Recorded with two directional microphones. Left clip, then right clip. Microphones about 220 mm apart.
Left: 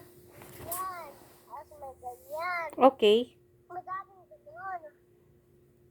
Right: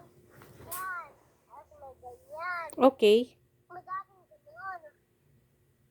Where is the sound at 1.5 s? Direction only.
20° right (ahead or behind).